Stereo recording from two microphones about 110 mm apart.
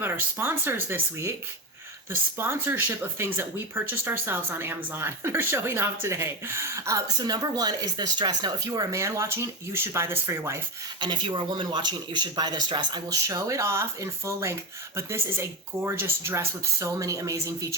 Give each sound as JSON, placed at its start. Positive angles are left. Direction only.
{"t": 0.0, "sound": "speech", "side_deg": -20}
{"t": 2.4, "sound": "speech", "side_deg": -20}
{"t": 11.0, "sound": "speech", "side_deg": -45}
{"t": 13.2, "sound": "speech", "side_deg": -30}